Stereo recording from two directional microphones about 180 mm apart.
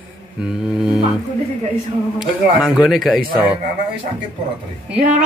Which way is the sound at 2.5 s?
5° right (ahead or behind).